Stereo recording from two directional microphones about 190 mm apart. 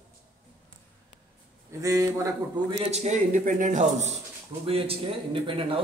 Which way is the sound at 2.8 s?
35° right (ahead or behind).